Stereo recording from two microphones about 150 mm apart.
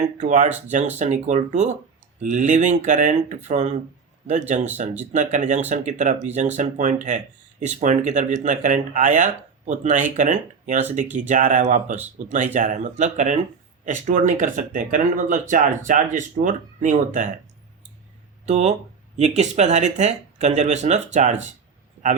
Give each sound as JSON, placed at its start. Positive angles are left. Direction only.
{"t": 0.0, "sound": "speech", "side_deg": -55}
{"t": 18.4, "sound": "speech", "side_deg": -50}